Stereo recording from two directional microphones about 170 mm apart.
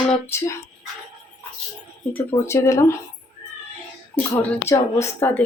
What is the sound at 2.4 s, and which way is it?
Speech, 15° left (ahead or behind).